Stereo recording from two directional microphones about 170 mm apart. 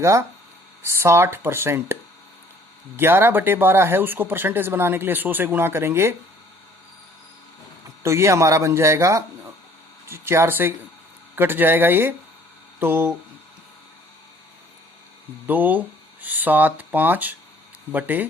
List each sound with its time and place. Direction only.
0.0 s speech: 15° right (ahead or behind)
8.0 s speech: 15° right (ahead or behind)
15.4 s speech: 10° right (ahead or behind)